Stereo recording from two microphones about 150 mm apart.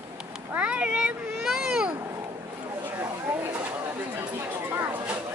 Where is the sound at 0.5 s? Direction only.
10° right (ahead or behind).